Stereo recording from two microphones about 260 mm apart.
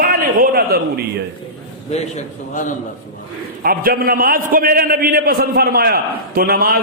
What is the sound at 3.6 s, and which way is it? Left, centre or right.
A man's voice, right.